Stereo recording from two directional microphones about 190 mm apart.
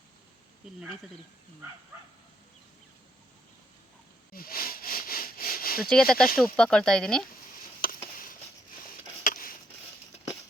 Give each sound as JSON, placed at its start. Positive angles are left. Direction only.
{"t": 4.3, "sound": "sniff", "side_deg": 50}
{"t": 5.8, "sound": "speech", "side_deg": 0}
{"t": 8.1, "sound": "a sound", "side_deg": 45}